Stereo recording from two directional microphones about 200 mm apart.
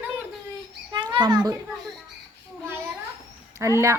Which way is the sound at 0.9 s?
25° right (ahead or behind).